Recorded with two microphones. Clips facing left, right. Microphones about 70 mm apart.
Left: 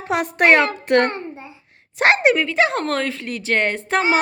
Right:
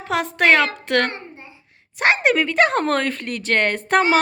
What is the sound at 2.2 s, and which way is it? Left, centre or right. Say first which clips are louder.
Speech: even; centre.